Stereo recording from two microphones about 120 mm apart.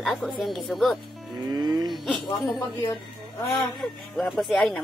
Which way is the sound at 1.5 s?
35° right (ahead or behind).